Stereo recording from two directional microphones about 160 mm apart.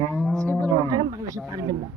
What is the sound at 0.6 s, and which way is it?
Speech, 20° right (ahead or behind).